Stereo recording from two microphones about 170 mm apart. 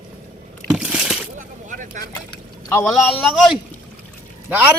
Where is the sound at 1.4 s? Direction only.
50° right (ahead or behind).